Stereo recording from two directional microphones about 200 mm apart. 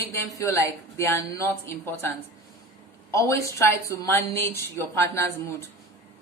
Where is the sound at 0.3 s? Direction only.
15° left (ahead or behind).